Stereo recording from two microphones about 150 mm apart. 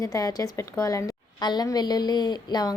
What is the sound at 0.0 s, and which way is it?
A woman's voice, 25° left (ahead or behind).